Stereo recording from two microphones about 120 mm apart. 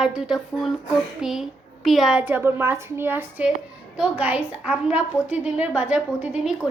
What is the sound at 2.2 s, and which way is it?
A woman's voice, 20° right (ahead or behind).